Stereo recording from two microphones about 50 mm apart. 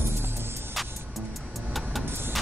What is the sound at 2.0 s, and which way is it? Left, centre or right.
Vehicle, right.